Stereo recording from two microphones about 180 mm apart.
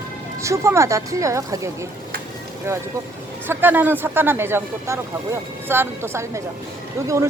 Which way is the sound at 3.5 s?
10° right (ahead or behind).